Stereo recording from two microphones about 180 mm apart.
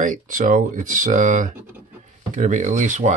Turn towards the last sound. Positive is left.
turn(degrees=-45)  # may be behind; listen again after turning